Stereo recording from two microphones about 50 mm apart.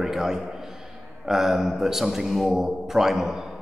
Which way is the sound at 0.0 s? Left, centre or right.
Centre.